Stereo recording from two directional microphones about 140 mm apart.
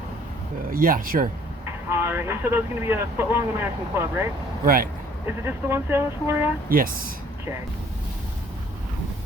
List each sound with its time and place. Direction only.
0.7 s speech: 90° right
1.9 s speech: 15° right (ahead or behind)
4.6 s speech: 90° right
5.2 s speech: 15° right (ahead or behind)
6.7 s speech: 90° right